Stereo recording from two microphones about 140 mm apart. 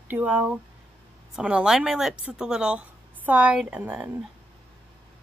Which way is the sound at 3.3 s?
10° right (ahead or behind).